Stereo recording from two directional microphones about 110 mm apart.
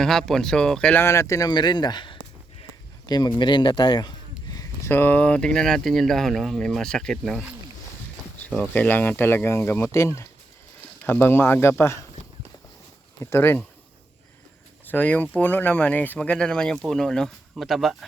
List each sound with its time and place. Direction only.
0.0 s speech: 5° left (ahead or behind)
0.9 s speech: 25° left (ahead or behind); by 4.1 s 45° left (ahead or behind)
4.9 s speech: 20° left (ahead or behind)
13.3 s speech: 20° left (ahead or behind)
14.8 s speech: 15° left (ahead or behind)